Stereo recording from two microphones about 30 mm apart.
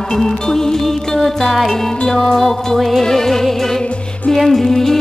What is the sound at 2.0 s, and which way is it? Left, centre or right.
Music, centre.